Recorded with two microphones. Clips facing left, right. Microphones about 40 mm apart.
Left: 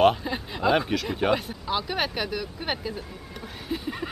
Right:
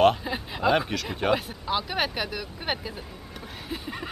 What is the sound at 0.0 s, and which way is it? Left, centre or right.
Speech, centre.